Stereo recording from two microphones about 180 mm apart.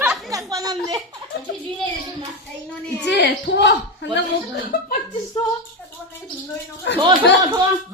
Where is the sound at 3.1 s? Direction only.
75° left (ahead or behind).